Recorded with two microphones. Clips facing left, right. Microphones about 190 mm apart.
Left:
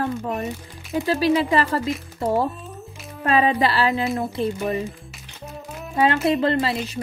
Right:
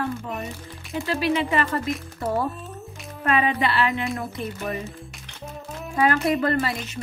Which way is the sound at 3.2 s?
30° left (ahead or behind).